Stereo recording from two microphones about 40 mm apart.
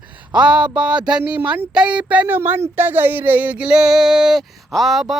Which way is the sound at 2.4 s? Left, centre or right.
Right.